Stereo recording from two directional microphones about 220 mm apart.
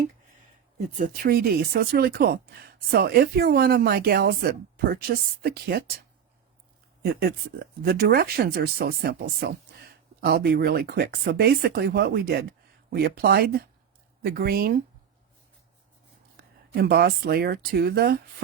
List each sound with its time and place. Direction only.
0.9 s speech: 40° right (ahead or behind)
7.0 s speech: 45° right (ahead or behind)
16.4 s speech: 45° right (ahead or behind)